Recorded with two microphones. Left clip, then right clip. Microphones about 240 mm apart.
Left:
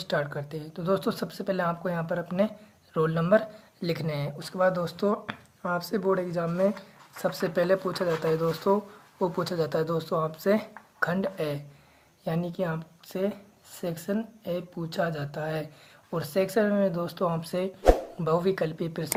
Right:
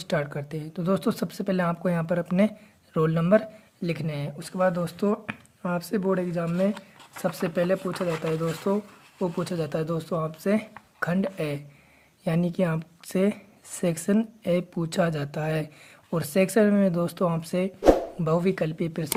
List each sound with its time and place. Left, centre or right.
0.0 s speech: right